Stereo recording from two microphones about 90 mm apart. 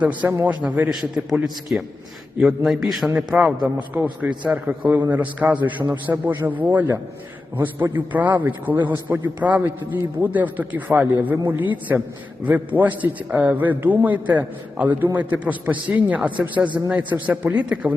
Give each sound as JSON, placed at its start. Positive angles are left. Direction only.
{"t": 0.0, "sound": "a man's voice", "side_deg": -20}
{"t": 0.9, "sound": "a man's voice", "side_deg": -5}
{"t": 17.0, "sound": "a man's voice", "side_deg": -60}
{"t": 17.2, "sound": "a man's voice", "side_deg": -15}